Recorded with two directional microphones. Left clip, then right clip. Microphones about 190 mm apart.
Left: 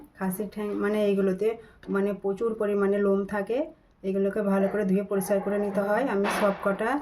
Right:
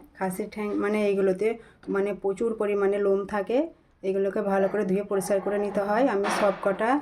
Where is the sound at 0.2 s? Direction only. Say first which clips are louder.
Right 2 dB; 20° right (ahead or behind).